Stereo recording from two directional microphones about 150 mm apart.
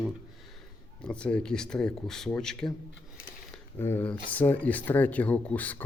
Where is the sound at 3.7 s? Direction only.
15° left (ahead or behind).